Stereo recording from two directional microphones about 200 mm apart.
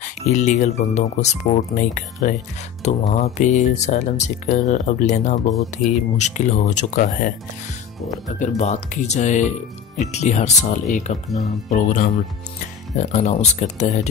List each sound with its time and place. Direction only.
0.0 s speech: 35° left (ahead or behind)
8.4 s speech: 35° left (ahead or behind)